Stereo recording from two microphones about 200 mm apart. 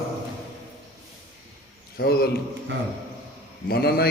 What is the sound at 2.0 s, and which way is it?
Speech, 50° left (ahead or behind).